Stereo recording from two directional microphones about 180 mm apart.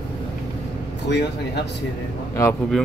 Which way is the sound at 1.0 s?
70° left (ahead or behind).